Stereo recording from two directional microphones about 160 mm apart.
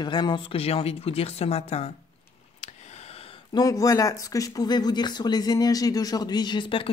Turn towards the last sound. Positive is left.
turn(degrees=30)  # may be behind; listen again after turning